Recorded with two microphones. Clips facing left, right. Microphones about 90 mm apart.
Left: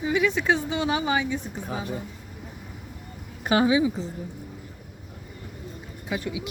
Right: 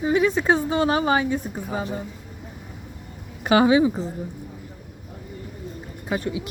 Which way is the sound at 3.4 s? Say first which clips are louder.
Right 4 dB; 85° right.